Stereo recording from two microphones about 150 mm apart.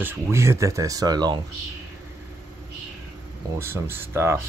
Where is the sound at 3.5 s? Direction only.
15° right (ahead or behind).